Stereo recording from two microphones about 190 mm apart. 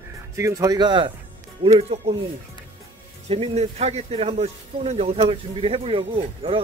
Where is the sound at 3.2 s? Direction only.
30° right (ahead or behind).